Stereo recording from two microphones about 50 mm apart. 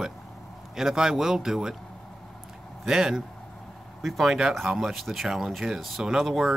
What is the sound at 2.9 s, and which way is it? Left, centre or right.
Speech, centre.